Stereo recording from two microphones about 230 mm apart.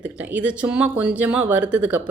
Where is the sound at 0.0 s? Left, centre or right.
Centre.